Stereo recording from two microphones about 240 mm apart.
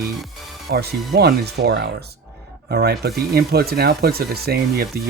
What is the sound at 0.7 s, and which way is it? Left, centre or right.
Speech, right.